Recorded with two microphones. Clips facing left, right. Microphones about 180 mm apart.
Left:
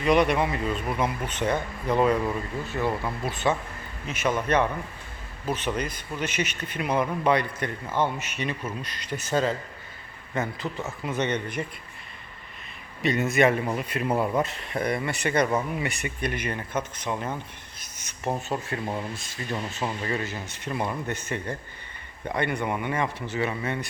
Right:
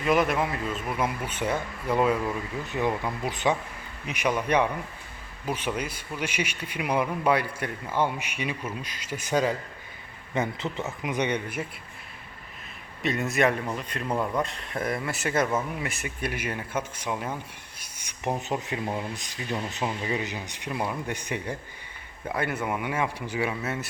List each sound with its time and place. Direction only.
0.0 s a man's voice: centre (ahead or behind)
13.0 s a man's voice: centre (ahead or behind); by 19.5 s 15° right (ahead or behind)
19.8 s a man's voice: 5° right (ahead or behind)